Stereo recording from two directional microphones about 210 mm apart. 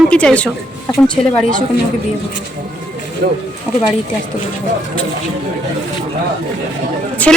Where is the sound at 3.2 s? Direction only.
45° right (ahead or behind).